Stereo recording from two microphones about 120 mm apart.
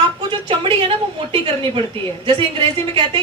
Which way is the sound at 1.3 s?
45° right (ahead or behind).